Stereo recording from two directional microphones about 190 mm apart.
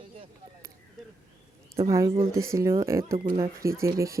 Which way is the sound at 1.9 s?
15° right (ahead or behind).